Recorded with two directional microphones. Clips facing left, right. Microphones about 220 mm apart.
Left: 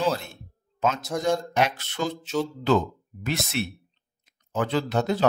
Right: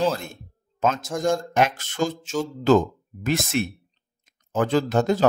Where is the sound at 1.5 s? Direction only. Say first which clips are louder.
Right 3 dB; 50° right (ahead or behind).